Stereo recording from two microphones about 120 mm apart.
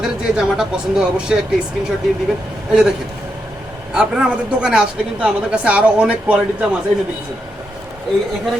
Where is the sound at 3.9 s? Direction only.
5° right (ahead or behind).